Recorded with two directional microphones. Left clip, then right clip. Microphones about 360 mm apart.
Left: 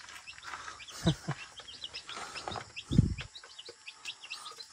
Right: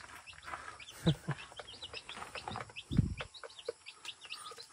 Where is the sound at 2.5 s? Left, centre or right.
Centre.